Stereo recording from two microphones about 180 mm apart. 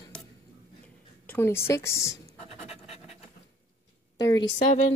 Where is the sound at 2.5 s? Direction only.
35° left (ahead or behind).